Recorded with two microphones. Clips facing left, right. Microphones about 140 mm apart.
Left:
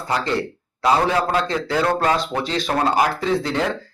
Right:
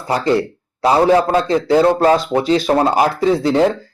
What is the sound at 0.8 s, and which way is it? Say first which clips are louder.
Speech: right 6 dB; 30° right (ahead or behind).